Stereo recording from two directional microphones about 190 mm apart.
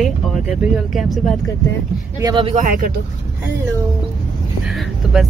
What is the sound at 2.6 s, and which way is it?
Speech, 45° right (ahead or behind).